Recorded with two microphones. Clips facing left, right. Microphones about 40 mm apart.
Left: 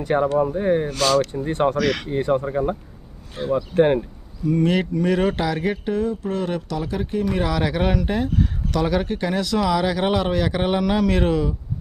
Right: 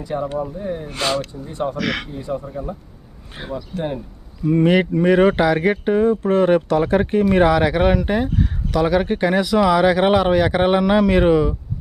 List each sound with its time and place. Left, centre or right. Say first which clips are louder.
0.0 s speech: left 5 dB; left
0.9 s speech: right 1 dB; right
1.2 s speech: left 5 dB; left
1.8 s speech: left 2 dB; centre
2.0 s speech: left 6 dB; left
3.4 s speech: left 6 dB; right
3.7 s speech: left 9 dB; left
4.5 s speech: right 4 dB; right
7.4 s speech: right 6 dB; centre
9.0 s speech: right 5 dB; right